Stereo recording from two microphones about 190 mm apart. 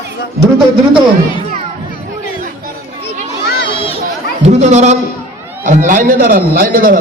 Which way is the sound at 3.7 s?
25° left (ahead or behind).